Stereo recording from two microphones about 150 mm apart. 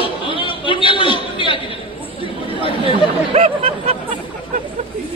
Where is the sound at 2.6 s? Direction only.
35° left (ahead or behind).